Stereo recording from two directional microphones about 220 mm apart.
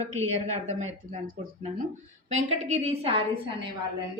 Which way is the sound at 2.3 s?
30° right (ahead or behind).